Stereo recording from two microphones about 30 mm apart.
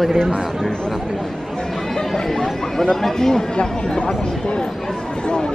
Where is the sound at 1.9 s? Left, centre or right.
Centre.